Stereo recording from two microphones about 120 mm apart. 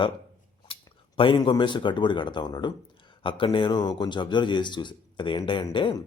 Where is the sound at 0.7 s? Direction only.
45° left (ahead or behind).